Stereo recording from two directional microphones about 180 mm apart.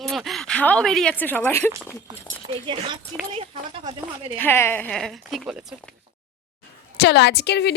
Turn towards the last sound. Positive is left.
turn(degrees=70)  # may be behind; listen again after turning